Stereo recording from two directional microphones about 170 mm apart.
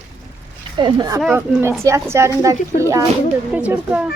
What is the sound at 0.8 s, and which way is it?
A woman's voice, 25° right (ahead or behind).